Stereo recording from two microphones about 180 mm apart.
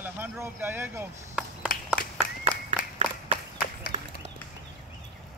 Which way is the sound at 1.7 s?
50° left (ahead or behind).